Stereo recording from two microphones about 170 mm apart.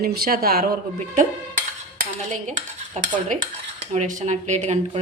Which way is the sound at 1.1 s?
50° right (ahead or behind).